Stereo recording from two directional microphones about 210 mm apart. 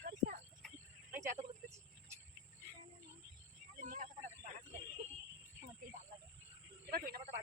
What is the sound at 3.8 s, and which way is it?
Snake, 40° right (ahead or behind).